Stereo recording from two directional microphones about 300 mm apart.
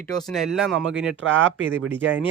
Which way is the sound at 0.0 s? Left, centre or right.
Centre.